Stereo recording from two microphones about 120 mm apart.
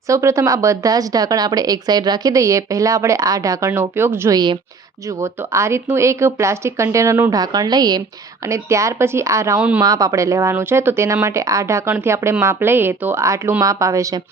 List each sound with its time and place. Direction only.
0.1 s speech: 25° right (ahead or behind)
9.6 s speech: 10° right (ahead or behind)
9.8 s speech: 30° right (ahead or behind)